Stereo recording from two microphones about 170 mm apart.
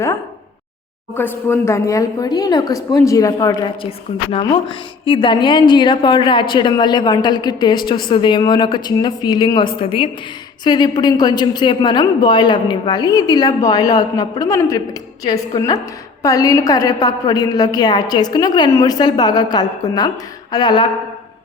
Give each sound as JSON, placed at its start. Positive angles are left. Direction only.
{"t": 1.1, "sound": "a woman's voice", "side_deg": 10}
{"t": 3.8, "sound": "a woman's voice", "side_deg": 35}